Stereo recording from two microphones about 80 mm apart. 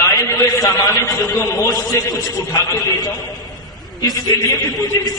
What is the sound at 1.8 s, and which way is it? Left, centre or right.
A man's voice, left.